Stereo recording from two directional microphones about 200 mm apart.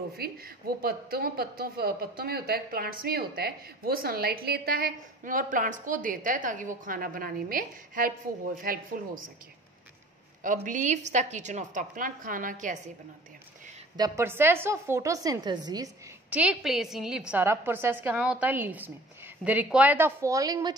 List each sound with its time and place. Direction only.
0.1 s a woman's voice: 50° right (ahead or behind)
10.4 s a woman's voice: 40° right (ahead or behind)
13.9 s a woman's voice: 15° right (ahead or behind)
16.3 s a woman's voice: 5° right (ahead or behind)